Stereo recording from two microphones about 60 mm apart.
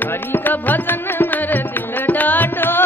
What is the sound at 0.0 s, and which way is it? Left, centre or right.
Music, left.